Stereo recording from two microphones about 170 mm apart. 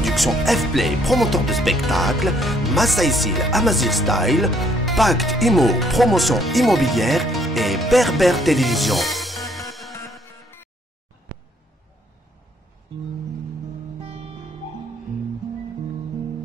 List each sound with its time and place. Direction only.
0.0 s music: centre (ahead or behind)
10.3 s music: 15° left (ahead or behind)
14.0 s music: 30° right (ahead or behind)